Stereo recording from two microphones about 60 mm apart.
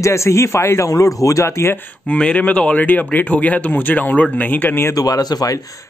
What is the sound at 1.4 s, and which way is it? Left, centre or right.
Speech, left.